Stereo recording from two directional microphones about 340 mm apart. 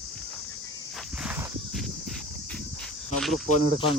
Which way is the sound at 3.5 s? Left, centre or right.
Centre.